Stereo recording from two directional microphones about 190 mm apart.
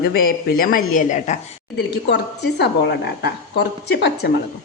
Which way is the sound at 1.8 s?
65° left (ahead or behind).